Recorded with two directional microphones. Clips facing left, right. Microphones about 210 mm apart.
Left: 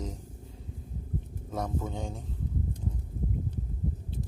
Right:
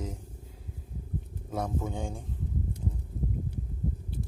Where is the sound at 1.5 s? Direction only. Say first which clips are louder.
Right 1 dB; 10° right (ahead or behind).